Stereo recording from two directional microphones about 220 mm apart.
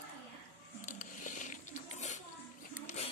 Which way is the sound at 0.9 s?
35° left (ahead or behind).